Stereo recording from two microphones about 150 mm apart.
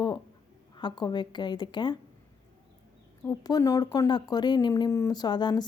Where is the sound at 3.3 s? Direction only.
25° left (ahead or behind).